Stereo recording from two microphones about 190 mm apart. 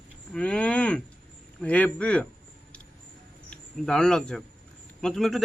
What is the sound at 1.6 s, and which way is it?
Speech, 5° left (ahead or behind).